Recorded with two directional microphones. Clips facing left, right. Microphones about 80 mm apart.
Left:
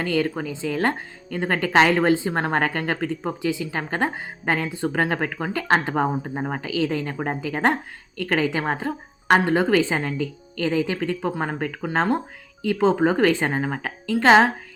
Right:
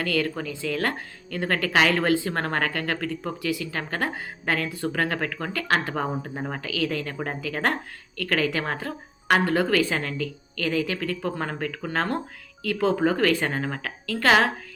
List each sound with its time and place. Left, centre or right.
0.0 s speech: left